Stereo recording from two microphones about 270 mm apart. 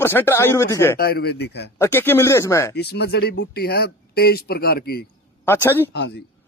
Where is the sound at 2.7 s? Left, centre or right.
Left.